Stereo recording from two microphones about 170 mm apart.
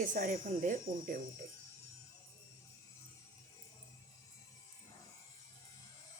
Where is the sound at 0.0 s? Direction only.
50° right (ahead or behind).